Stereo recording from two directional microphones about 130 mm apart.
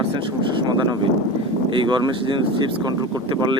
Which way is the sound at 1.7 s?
35° right (ahead or behind).